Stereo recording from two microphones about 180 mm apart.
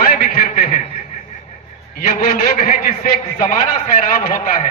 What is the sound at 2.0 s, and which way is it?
A man's voice, 45° left (ahead or behind).